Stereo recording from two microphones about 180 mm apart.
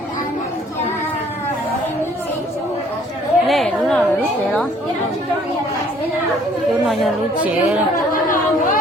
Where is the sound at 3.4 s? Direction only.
Centre (ahead or behind).